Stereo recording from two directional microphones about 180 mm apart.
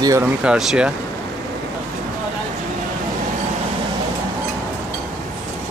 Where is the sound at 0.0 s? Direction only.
15° right (ahead or behind).